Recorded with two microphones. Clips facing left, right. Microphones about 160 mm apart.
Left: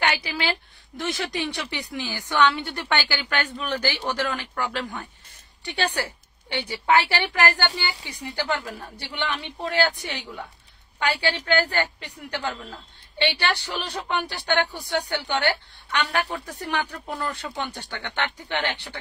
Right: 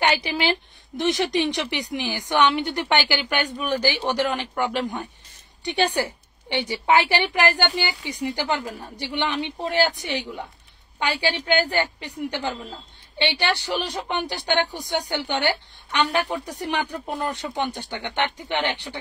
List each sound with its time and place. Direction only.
0.0 s a woman's voice: 20° right (ahead or behind)
13.7 s a woman's voice: 15° right (ahead or behind)